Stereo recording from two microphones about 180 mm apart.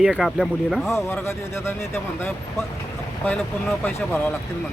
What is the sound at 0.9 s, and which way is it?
A man's voice, 15° left (ahead or behind).